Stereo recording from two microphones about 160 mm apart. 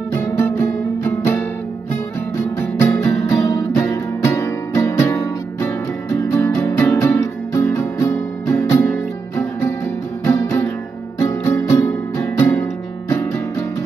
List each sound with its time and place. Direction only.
0.4 s music: 15° left (ahead or behind)